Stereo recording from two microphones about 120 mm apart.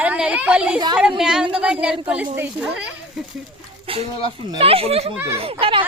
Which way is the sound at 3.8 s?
50° right (ahead or behind).